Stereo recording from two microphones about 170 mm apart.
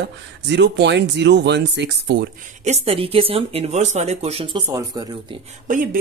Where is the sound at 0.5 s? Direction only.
90° right.